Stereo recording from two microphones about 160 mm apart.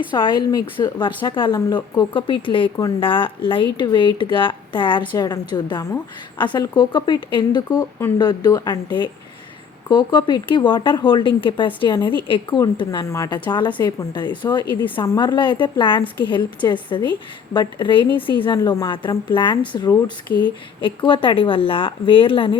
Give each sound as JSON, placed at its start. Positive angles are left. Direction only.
{"t": 0.1, "sound": "a woman's voice", "side_deg": 30}